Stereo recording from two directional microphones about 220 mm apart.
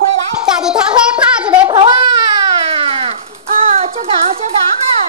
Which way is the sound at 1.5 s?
20° right (ahead or behind).